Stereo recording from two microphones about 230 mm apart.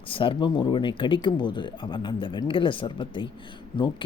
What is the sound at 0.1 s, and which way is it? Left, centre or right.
Speech, left.